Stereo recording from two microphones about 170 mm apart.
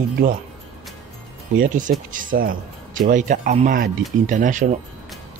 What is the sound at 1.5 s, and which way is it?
Speech, 50° right (ahead or behind).